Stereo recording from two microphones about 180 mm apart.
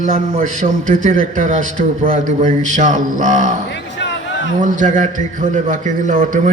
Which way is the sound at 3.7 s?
80° left.